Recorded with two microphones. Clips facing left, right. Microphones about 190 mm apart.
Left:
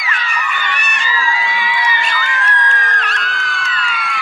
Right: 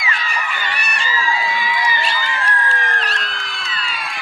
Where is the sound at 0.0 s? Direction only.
30° right (ahead or behind).